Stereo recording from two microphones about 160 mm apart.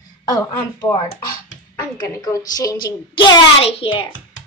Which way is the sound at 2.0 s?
25° left (ahead or behind).